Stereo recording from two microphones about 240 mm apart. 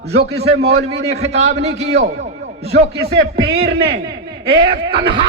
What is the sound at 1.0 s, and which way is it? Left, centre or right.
Speech, right.